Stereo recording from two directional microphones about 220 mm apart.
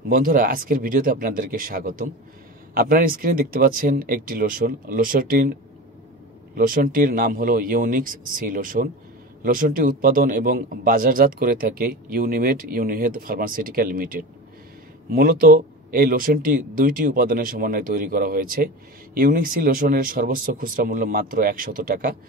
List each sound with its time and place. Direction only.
0.1 s a man's voice: 40° right (ahead or behind)
6.5 s a man's voice: 40° right (ahead or behind)